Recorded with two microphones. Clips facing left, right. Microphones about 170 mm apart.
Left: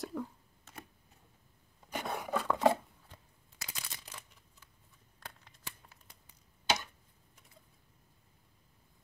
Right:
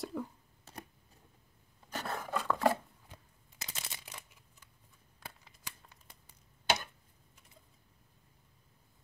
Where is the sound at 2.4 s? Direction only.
20° left (ahead or behind).